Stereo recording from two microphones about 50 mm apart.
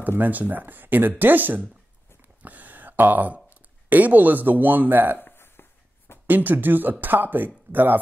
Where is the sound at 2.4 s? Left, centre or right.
Right.